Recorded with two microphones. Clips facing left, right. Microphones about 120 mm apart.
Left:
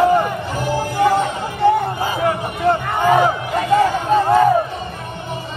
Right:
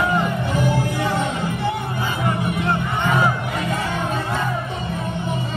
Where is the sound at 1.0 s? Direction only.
55° left (ahead or behind).